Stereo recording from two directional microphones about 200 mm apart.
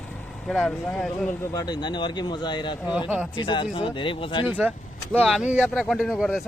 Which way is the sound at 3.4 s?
25° left (ahead or behind).